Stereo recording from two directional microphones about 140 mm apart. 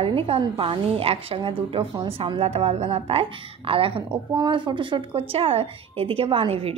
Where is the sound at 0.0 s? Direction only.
40° right (ahead or behind).